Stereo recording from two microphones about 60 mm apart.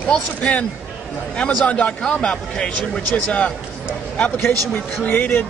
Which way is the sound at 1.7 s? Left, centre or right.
Left.